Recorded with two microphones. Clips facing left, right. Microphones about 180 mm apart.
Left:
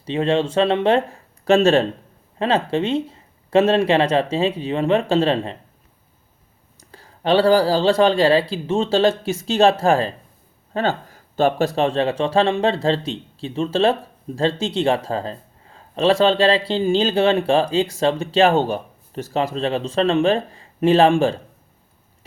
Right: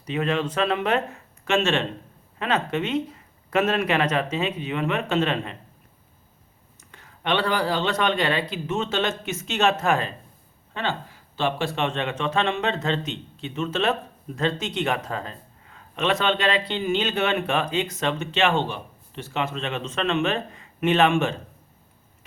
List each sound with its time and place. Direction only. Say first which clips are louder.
0.0 s speech: left 6 dB; 30° left (ahead or behind)
6.7 s speech: left 5 dB; 35° left (ahead or behind)
10.8 s speech: left 7 dB; 45° left (ahead or behind)